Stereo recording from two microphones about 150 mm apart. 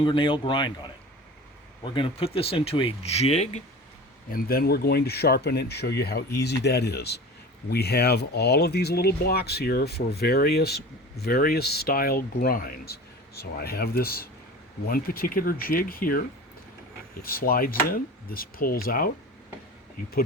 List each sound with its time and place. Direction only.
0.0 s speech: 35° left (ahead or behind)
1.8 s speech: 35° left (ahead or behind)
4.3 s speech: 80° left
17.2 s speech: 80° left